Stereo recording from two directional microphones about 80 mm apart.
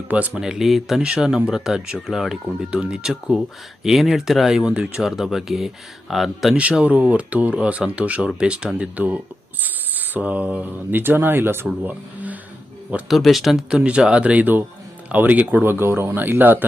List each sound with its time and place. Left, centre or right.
0.1 s speech: centre
0.4 s speech: centre
6.6 s speech: centre
13.1 s speech: centre; by 16.6 s right